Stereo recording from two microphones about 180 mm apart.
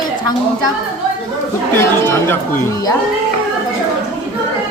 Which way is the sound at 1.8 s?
15° left (ahead or behind).